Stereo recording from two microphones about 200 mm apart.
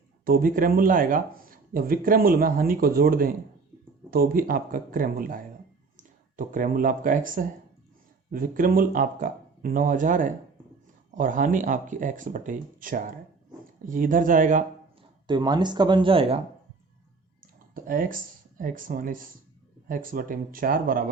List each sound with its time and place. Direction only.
0.3 s speech: 45° right (ahead or behind)
15.3 s speech: 20° right (ahead or behind)
17.4 s speech: 45° right (ahead or behind)